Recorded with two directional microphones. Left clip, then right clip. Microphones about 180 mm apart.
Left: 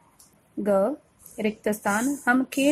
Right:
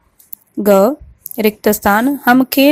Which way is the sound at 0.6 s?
35° right (ahead or behind).